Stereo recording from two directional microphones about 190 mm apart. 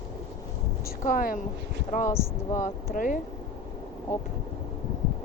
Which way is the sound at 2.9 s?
45° left (ahead or behind).